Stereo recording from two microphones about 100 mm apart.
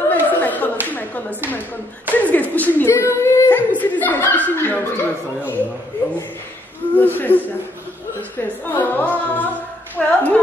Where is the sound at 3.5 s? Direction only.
15° left (ahead or behind).